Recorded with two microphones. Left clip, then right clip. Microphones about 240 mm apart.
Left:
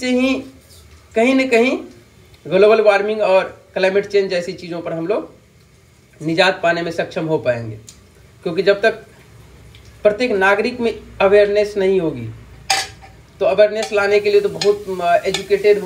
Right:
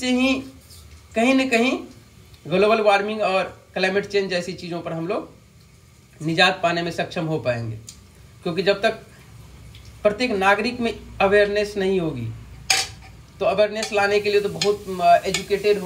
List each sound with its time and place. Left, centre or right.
0.0 s a man's voice: centre
6.2 s a man's voice: centre
10.0 s a man's voice: centre
12.6 s a sound: centre
13.4 s a man's voice: centre